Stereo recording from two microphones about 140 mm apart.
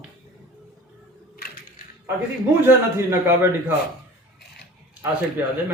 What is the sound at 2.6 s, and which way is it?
Speech, 20° right (ahead or behind).